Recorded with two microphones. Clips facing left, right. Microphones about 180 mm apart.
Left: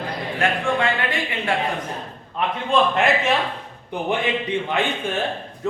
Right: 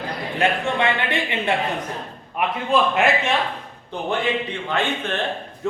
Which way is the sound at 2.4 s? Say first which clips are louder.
Even; 10° right (ahead or behind).